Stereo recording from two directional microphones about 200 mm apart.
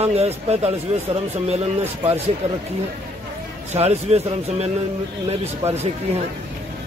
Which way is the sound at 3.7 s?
30° right (ahead or behind).